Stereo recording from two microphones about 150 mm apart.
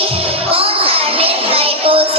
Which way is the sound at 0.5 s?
40° right (ahead or behind).